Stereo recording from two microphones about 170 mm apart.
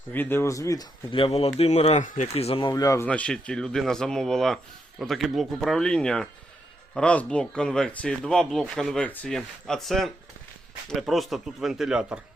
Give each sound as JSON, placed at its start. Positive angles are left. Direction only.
{"t": 0.1, "sound": "speech", "side_deg": 10}
{"t": 1.1, "sound": "speech", "side_deg": 35}
{"t": 3.1, "sound": "speech", "side_deg": 5}